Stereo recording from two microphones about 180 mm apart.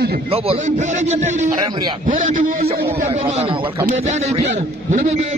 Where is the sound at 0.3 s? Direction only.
35° right (ahead or behind).